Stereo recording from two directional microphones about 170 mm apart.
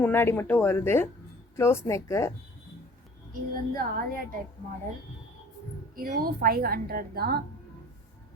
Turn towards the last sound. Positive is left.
turn(degrees=-65)  # may be behind; listen again after turning